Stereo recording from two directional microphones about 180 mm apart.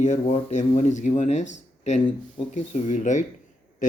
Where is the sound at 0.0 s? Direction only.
40° left (ahead or behind).